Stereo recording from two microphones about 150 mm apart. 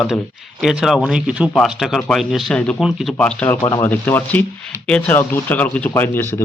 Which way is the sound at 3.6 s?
25° left (ahead or behind).